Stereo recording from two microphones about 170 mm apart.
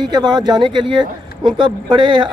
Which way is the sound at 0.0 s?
25° right (ahead or behind).